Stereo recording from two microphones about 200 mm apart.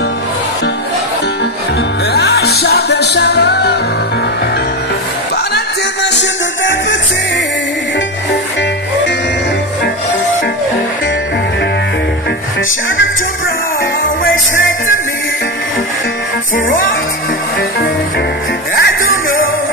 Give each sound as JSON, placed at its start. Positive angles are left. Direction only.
{"t": 2.1, "sound": "music", "side_deg": 55}
{"t": 6.0, "sound": "music", "side_deg": 65}
{"t": 18.8, "sound": "music", "side_deg": 50}